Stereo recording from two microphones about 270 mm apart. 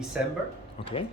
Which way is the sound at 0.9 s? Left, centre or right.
Centre.